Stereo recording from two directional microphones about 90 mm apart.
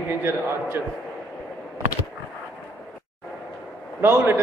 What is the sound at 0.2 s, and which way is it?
Speech, 25° right (ahead or behind).